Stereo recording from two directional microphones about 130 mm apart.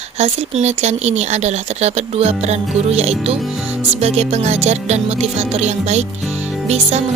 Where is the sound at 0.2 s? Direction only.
55° right (ahead or behind).